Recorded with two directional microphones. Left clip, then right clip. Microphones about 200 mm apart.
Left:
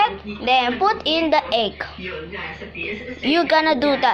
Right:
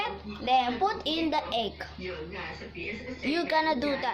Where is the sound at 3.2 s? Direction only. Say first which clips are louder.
Left 10 dB; 10° left (ahead or behind).